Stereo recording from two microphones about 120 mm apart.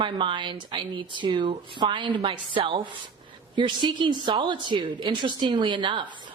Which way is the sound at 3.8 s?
40° right (ahead or behind).